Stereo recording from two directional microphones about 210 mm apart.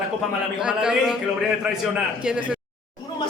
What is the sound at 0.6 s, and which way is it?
Speech, 5° right (ahead or behind).